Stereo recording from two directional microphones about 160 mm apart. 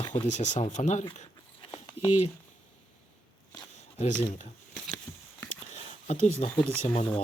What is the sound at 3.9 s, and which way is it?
Speech, 45° left (ahead or behind).